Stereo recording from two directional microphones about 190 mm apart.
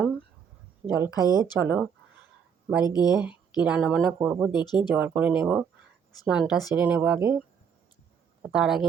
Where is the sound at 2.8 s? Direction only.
20° left (ahead or behind).